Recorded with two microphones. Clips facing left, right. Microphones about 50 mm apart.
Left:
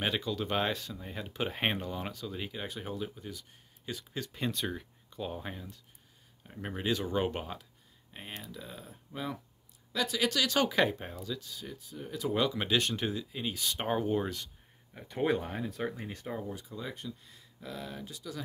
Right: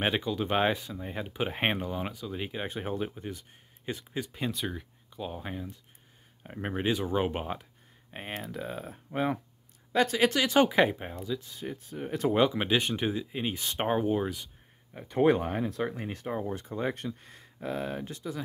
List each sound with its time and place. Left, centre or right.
0.0 s speech: right
4.2 s speech: centre
6.4 s speech: right
7.0 s speech: centre
8.4 s speech: right; by 11.4 s centre
11.4 s speech: right
12.3 s speech: right
13.8 s speech: centre
15.2 s speech: right
16.4 s speech: right